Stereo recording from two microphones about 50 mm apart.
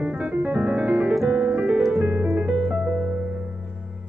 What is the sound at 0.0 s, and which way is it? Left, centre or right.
Piano, right.